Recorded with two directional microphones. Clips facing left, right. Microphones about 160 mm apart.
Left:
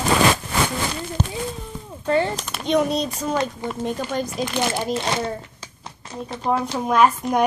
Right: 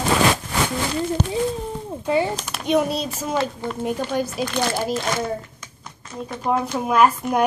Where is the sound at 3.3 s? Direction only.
15° left (ahead or behind).